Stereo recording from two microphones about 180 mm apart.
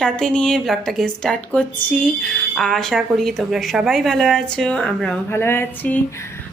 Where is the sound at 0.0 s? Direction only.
5° left (ahead or behind).